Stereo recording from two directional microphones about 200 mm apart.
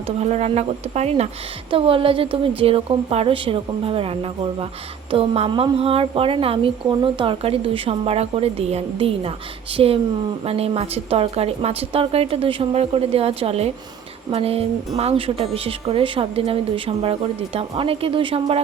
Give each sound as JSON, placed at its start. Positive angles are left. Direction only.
{"t": 0.2, "sound": "a woman's voice", "side_deg": -30}